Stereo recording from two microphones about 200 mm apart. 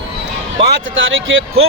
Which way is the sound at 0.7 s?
75° right (ahead or behind).